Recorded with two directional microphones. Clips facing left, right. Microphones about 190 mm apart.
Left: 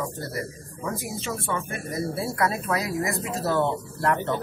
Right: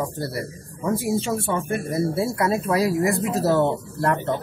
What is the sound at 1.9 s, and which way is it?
Speech, 25° right (ahead or behind).